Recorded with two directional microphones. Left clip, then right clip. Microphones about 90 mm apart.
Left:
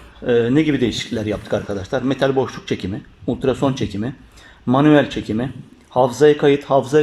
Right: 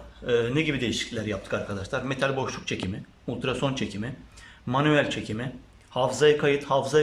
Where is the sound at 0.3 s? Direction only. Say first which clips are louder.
Left 9 dB; 45° left (ahead or behind).